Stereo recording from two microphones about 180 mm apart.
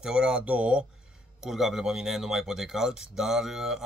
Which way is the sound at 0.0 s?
5° right (ahead or behind).